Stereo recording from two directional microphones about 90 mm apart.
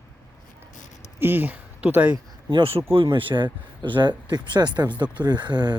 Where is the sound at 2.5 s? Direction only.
75° right (ahead or behind).